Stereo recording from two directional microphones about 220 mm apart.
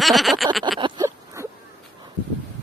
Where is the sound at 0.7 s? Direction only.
20° right (ahead or behind).